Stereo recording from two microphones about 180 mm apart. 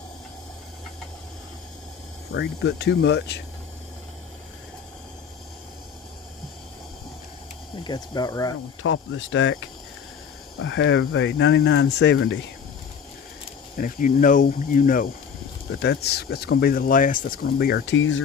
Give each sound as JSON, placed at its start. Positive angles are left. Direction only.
{"t": 2.3, "sound": "speech", "side_deg": 70}
{"t": 7.8, "sound": "speech", "side_deg": 20}
{"t": 8.8, "sound": "speech", "side_deg": 90}
{"t": 13.7, "sound": "speech", "side_deg": 50}
{"t": 15.8, "sound": "speech", "side_deg": 65}